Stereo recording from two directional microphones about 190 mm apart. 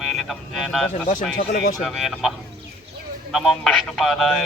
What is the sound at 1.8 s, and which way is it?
Speech, centre (ahead or behind).